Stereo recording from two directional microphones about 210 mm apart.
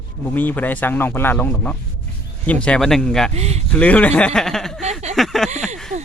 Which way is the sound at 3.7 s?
5° left (ahead or behind).